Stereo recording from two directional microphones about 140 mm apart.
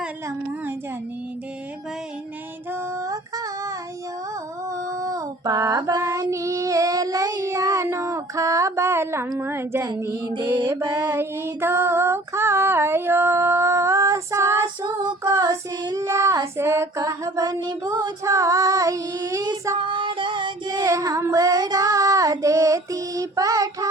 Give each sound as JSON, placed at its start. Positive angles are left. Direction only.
{"t": 4.9, "sound": "child singing", "side_deg": -25}
{"t": 10.2, "sound": "music", "side_deg": -35}
{"t": 10.9, "sound": "female singing", "side_deg": -15}
{"t": 15.0, "sound": "child singing", "side_deg": -25}
{"t": 18.0, "sound": "female singing", "side_deg": -20}